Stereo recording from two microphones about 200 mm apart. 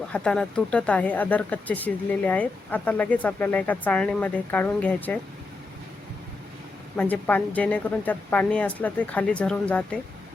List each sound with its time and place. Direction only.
0.1 s speech: 5° left (ahead or behind)
6.9 s speech: 10° left (ahead or behind)